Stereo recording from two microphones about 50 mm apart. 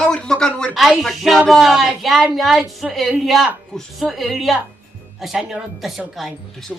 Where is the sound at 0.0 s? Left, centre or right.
Centre.